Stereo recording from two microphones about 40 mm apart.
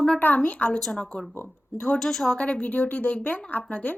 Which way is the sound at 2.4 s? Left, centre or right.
Left.